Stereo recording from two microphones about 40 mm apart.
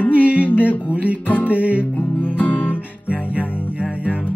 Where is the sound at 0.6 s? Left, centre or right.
Right.